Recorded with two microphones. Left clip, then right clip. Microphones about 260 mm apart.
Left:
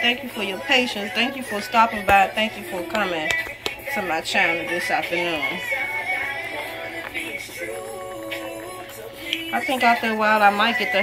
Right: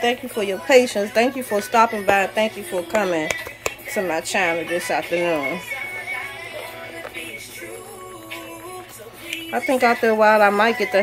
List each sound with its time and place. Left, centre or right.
0.0 s a woman's voice: centre
9.5 s speech: centre